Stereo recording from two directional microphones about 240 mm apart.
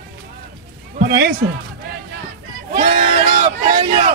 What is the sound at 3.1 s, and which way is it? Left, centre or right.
Speech, right.